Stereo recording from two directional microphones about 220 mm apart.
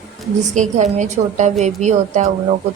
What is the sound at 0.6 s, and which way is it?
A woman's voice, 30° right (ahead or behind).